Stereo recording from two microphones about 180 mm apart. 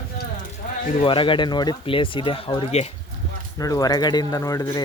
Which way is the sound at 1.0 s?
30° left (ahead or behind).